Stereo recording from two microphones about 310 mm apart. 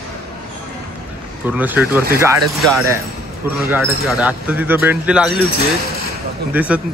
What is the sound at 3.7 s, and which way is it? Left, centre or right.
Speech, centre.